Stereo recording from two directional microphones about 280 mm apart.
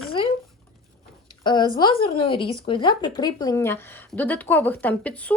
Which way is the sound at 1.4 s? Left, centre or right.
Centre.